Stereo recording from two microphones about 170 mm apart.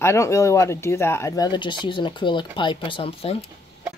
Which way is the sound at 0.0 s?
15° left (ahead or behind).